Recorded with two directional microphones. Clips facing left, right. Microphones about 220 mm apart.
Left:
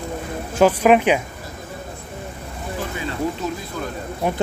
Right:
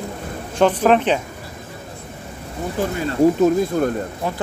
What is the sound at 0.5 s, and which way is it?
Speech, 10° left (ahead or behind).